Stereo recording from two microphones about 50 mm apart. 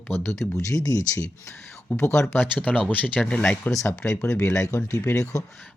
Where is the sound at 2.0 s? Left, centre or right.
Left.